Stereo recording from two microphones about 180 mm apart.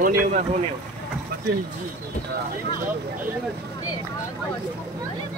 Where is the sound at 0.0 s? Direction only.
40° right (ahead or behind).